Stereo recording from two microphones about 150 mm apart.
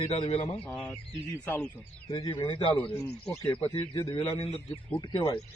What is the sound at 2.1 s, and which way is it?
Speech, 30° left (ahead or behind).